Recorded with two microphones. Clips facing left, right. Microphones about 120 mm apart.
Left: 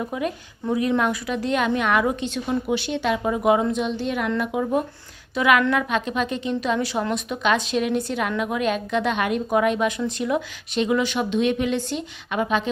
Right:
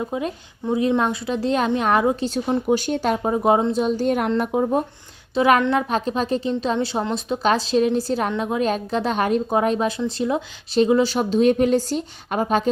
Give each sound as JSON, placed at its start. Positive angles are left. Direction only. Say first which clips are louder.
{"t": 0.0, "sound": "a woman's voice", "louder": "right 1 dB", "side_deg": -25}